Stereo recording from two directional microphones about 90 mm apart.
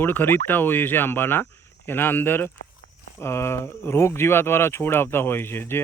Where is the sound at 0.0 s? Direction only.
20° left (ahead or behind).